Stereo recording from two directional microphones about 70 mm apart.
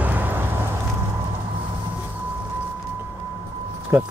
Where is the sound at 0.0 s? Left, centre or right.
Right.